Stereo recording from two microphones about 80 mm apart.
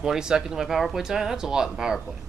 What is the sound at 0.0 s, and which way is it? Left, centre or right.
Speech, centre.